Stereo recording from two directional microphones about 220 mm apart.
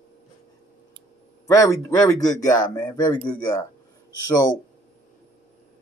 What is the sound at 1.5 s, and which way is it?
Speech, 15° left (ahead or behind).